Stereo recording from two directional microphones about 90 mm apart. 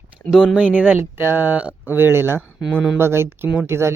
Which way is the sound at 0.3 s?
5° right (ahead or behind).